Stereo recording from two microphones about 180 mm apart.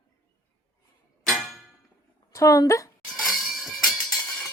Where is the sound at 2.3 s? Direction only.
20° left (ahead or behind).